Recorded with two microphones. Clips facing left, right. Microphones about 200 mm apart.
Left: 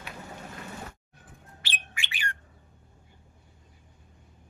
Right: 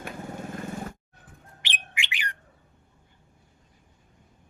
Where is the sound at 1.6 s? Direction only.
15° right (ahead or behind).